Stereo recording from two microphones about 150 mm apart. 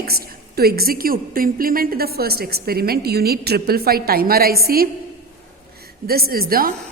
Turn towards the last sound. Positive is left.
turn(degrees=-75)  # may be behind; listen again after turning